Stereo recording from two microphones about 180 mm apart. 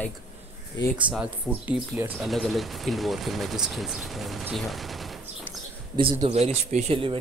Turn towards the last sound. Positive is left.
turn(degrees=-30)  # may be behind; listen again after turning